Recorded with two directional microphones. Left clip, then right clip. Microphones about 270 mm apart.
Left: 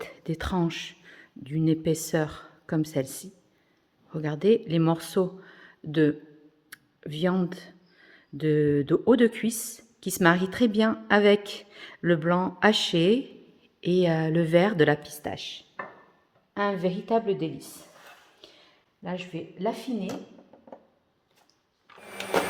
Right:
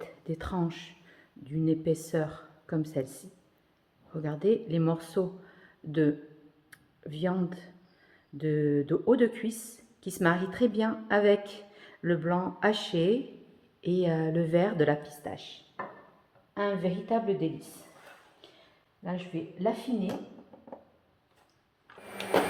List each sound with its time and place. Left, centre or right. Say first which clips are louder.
0.0 s speech: left 4 dB; left
18.4 s a sound: left 5 dB; left
19.0 s speech: left 2 dB; left